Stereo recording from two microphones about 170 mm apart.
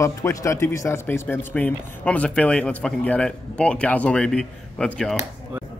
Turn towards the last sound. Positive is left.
turn(degrees=5)  # may be behind; listen again after turning